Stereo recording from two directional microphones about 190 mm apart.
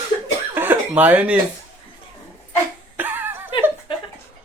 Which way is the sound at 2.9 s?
10° right (ahead or behind).